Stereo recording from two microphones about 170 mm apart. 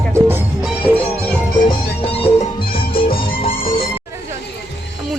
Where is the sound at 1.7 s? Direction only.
35° left (ahead or behind).